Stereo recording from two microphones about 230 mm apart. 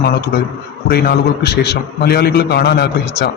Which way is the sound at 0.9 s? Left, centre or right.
Left.